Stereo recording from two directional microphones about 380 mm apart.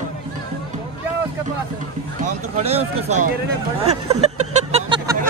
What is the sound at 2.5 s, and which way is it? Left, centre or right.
Speech, centre.